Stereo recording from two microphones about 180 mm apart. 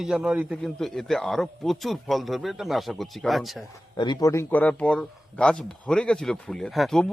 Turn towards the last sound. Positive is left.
turn(degrees=0)  # may be behind; listen again after turning